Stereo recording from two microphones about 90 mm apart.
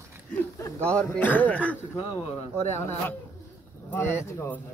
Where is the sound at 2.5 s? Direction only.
25° left (ahead or behind).